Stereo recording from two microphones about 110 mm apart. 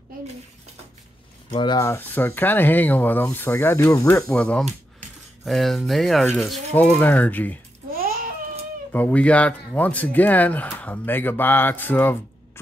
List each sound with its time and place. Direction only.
1.5 s speech: 45° left (ahead or behind)
1.8 s speech: 20° left (ahead or behind)
4.3 s speech: 10° left (ahead or behind)
6.7 s speech: 15° left (ahead or behind)
8.9 s speech: 15° left (ahead or behind)